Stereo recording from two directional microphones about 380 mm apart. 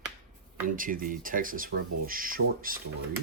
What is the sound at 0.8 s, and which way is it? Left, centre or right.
Speech, right.